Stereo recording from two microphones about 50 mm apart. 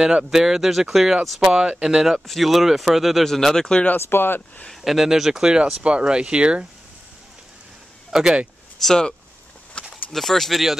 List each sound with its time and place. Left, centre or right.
0.0 s speech: centre
1.6 s speech: centre
2.1 s speech: centre
3.9 s speech: left
4.8 s speech: centre
8.1 s speech: centre
8.8 s speech: centre
9.8 s a sound: left
10.1 s speech: centre